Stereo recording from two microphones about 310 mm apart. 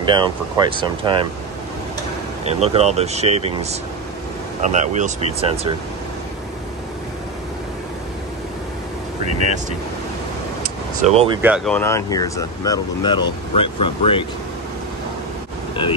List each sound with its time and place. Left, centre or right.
0.0 s speech: centre
2.4 s speech: right
10.6 s vehicle: right
11.4 s speech: centre